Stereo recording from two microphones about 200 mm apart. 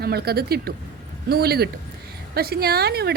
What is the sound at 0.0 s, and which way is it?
Speech, 50° right (ahead or behind).